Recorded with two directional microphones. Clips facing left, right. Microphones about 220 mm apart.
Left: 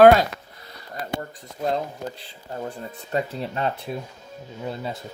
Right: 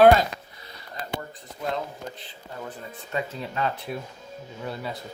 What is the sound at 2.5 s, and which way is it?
Speech, 40° left (ahead or behind).